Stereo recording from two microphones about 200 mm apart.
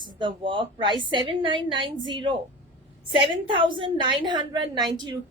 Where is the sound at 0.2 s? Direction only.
25° right (ahead or behind).